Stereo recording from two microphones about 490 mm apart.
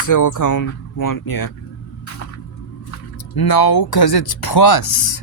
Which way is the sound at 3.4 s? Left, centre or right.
Left.